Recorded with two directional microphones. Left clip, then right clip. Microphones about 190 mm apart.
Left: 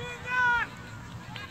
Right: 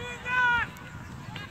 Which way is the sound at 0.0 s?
50° left (ahead or behind).